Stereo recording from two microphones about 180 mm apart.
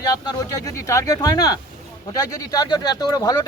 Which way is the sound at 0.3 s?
20° left (ahead or behind).